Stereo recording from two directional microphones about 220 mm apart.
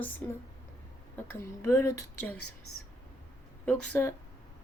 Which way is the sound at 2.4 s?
80° left.